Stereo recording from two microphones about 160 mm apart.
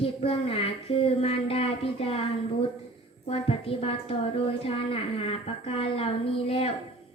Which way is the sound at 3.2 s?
35° left (ahead or behind).